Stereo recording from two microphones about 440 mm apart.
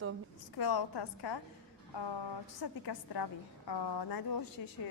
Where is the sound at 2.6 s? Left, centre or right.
Left.